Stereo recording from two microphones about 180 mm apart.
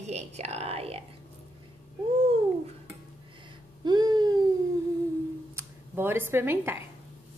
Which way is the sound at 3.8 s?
20° right (ahead or behind).